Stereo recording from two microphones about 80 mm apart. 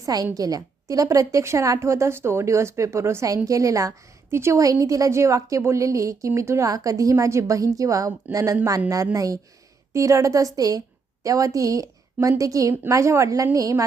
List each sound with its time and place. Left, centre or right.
0.0 s a woman's voice: right
3.2 s a woman's voice: right
4.6 s a woman's voice: right